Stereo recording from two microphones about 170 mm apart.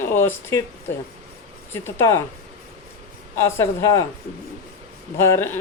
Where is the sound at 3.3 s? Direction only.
15° left (ahead or behind).